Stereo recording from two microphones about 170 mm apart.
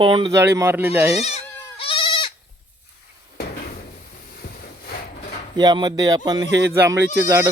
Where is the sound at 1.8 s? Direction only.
30° left (ahead or behind).